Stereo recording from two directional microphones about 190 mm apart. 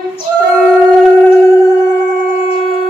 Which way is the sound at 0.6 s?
5° right (ahead or behind).